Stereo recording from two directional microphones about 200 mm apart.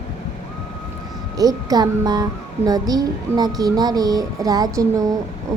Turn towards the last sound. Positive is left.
turn(degrees=-15)  # may be behind; listen again after turning